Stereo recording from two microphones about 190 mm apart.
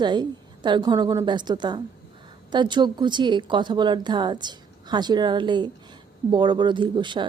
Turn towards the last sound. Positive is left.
turn(degrees=-25)  # may be behind; listen again after turning